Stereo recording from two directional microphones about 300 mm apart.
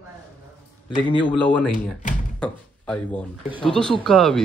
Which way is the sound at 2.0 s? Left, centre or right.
Left.